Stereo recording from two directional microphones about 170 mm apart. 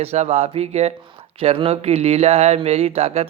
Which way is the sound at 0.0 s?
40° right (ahead or behind).